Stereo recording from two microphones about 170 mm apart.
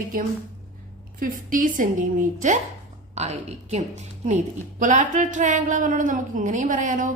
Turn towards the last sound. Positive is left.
turn(degrees=-50)  # may be behind; listen again after turning